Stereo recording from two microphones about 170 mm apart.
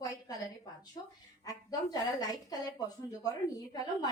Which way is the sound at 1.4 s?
20° left (ahead or behind).